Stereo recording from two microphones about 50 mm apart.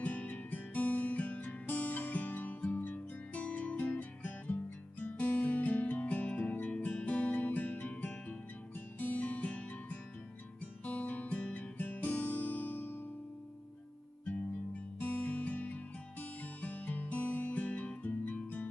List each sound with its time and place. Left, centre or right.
0.0 s guitar: left
5.0 s music: left
10.9 s guitar: left
11.8 s music: left
15.0 s music: left